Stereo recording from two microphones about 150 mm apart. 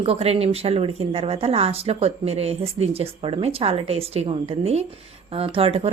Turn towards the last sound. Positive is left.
turn(degrees=-40)  # may be behind; listen again after turning